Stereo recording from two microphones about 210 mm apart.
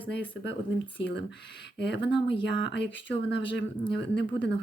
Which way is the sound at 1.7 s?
55° left (ahead or behind).